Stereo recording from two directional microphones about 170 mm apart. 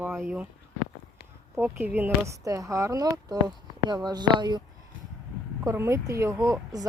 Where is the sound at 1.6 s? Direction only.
10° right (ahead or behind).